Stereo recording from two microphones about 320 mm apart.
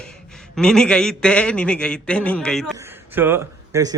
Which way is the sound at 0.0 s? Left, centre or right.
Centre.